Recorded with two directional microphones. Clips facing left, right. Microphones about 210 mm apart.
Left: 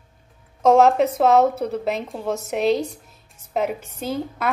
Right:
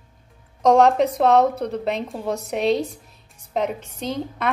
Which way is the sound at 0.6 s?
5° left (ahead or behind).